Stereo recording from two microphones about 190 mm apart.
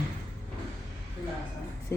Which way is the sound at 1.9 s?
15° left (ahead or behind).